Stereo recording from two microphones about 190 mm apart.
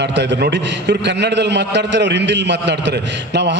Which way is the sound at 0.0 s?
65° right (ahead or behind).